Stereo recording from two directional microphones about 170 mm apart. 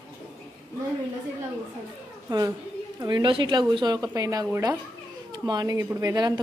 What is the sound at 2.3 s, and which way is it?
A woman's voice, 20° right (ahead or behind).